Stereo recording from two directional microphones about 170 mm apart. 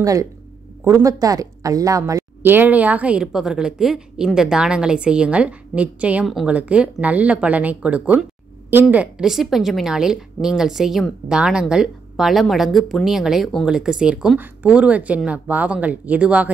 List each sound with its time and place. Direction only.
0.0 s a woman's voice: 20° right (ahead or behind)